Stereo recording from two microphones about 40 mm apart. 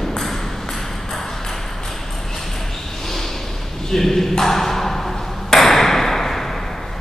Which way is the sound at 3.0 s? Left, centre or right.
Centre.